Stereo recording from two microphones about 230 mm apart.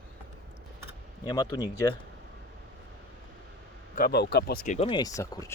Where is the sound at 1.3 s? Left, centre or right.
Centre.